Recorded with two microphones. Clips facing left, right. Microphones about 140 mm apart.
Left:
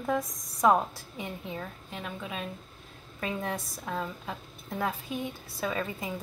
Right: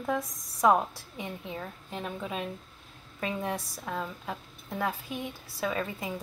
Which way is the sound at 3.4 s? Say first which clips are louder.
Right 1 dB; 15° right (ahead or behind).